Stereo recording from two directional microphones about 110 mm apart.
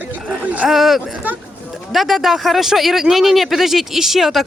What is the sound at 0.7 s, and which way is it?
Speech, centre (ahead or behind).